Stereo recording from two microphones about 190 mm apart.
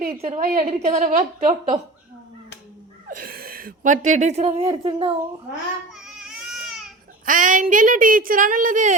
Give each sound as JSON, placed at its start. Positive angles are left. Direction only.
{"t": 0.2, "sound": "a woman's voice", "side_deg": -30}
{"t": 3.1, "sound": "a woman's voice", "side_deg": -50}
{"t": 5.9, "sound": "baby cry", "side_deg": -5}
{"t": 7.3, "sound": "a woman's voice", "side_deg": -45}